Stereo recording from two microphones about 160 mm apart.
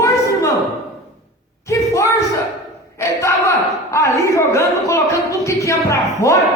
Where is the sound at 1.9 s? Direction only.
20° left (ahead or behind).